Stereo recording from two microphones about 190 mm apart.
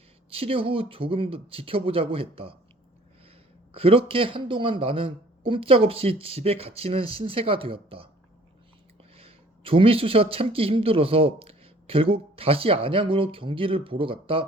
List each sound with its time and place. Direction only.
0.3 s speech: 30° right (ahead or behind)
3.7 s speech: 30° right (ahead or behind)
9.1 s speech: 30° right (ahead or behind)